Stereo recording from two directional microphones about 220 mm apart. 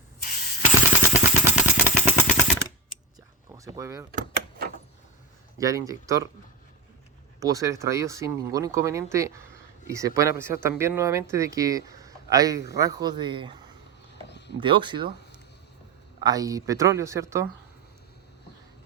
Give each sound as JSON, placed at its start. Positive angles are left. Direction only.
{"t": 0.3, "sound": "a sound", "side_deg": 40}
{"t": 1.1, "sound": "vehicle", "side_deg": 35}
{"t": 2.2, "sound": "machine gun", "side_deg": 35}
{"t": 3.5, "sound": "vehicle", "side_deg": -15}
{"t": 4.1, "sound": "door", "side_deg": -35}
{"t": 5.5, "sound": "speech", "side_deg": -15}
{"t": 7.3, "sound": "speech", "side_deg": -15}
{"t": 14.3, "sound": "a sound", "side_deg": 50}
{"t": 14.6, "sound": "speech", "side_deg": -20}
{"t": 16.2, "sound": "speech", "side_deg": -15}